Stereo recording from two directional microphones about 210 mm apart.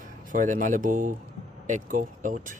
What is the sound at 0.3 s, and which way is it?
Speech, 40° right (ahead or behind).